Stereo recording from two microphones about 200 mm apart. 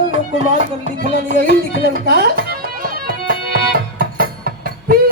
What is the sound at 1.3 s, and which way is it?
Music, 45° right (ahead or behind).